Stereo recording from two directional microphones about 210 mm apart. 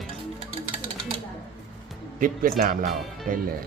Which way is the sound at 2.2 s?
40° right (ahead or behind).